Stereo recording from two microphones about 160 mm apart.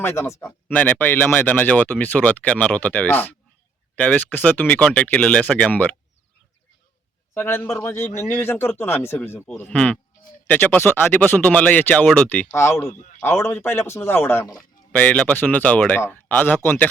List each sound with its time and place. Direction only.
0.0 s a man's voice: 15° left (ahead or behind)
7.3 s a man's voice: 15° left (ahead or behind)
8.0 s speech: 45° left (ahead or behind)
8.3 s a man's voice: 15° left (ahead or behind)